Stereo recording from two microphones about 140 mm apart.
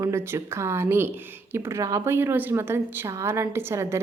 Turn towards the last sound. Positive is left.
turn(degrees=-20)  # may be behind; listen again after turning